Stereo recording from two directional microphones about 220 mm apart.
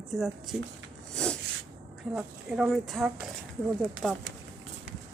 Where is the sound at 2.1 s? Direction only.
5° right (ahead or behind).